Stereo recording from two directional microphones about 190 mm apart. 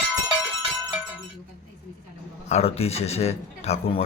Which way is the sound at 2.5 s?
35° left (ahead or behind).